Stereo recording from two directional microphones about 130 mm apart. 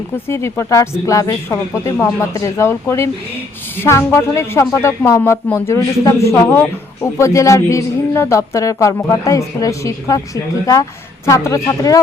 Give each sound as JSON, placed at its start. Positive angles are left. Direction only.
{"t": 0.3, "sound": "a man's voice", "side_deg": 20}